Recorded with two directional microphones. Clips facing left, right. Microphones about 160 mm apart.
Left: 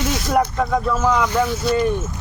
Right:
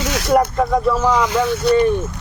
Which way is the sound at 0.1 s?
80° right.